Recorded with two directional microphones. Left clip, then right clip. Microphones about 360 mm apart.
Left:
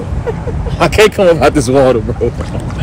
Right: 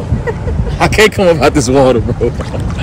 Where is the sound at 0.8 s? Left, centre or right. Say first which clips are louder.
Left 1 dB; centre.